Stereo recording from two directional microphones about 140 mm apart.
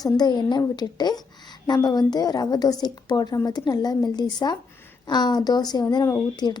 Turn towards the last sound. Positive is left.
turn(degrees=30)  # may be behind; listen again after turning